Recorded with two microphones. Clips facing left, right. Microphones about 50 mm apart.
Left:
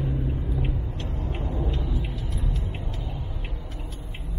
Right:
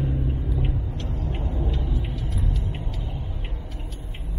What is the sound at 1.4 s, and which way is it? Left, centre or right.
Vehicle, centre.